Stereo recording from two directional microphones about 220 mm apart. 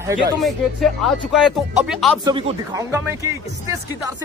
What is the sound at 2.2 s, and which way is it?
Speech, 20° right (ahead or behind).